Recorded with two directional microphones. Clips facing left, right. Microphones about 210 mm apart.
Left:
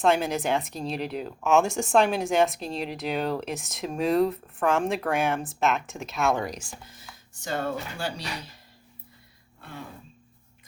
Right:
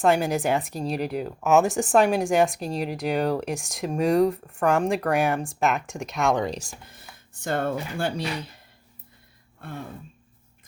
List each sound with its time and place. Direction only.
0.0 s speech: centre (ahead or behind)
6.2 s speech: 20° right (ahead or behind)
6.5 s speech: 40° right (ahead or behind)
7.4 s speech: 55° right (ahead or behind)
9.6 s throat clearing: 50° right (ahead or behind)